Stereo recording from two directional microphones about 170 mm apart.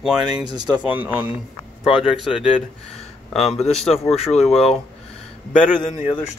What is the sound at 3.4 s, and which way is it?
Speech, 40° left (ahead or behind).